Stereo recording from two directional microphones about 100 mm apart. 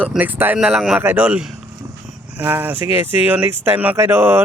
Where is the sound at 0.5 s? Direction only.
5° right (ahead or behind).